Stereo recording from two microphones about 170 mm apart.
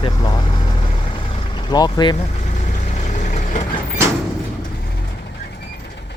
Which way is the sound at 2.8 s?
45° left (ahead or behind).